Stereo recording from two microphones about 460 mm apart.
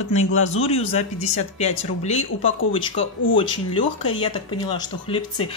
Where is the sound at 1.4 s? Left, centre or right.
Centre.